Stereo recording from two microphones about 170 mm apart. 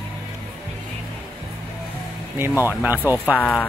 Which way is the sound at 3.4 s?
10° left (ahead or behind).